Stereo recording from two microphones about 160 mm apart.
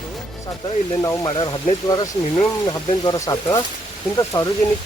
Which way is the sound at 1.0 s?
25° left (ahead or behind).